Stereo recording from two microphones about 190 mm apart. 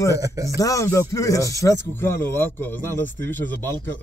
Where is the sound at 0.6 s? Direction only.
15° left (ahead or behind).